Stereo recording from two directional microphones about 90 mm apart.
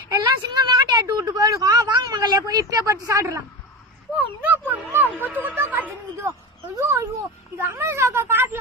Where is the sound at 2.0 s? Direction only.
50° right (ahead or behind); by 3.3 s 35° right (ahead or behind).